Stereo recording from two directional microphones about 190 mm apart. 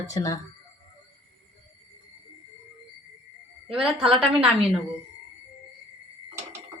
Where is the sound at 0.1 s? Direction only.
15° left (ahead or behind).